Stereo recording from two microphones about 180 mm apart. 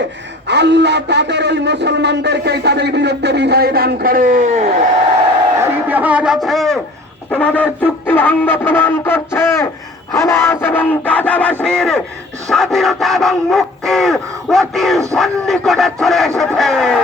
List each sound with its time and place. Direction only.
0.4 s a man's voice: 70° right (ahead or behind); by 4.7 s 45° right (ahead or behind)
5.5 s a man's voice: 10° right (ahead or behind)
7.3 s music: 5° left (ahead or behind)
11.6 s dog: 5° left (ahead or behind)